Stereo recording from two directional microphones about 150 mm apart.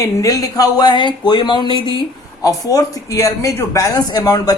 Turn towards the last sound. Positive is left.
turn(degrees=25)  # may be behind; listen again after turning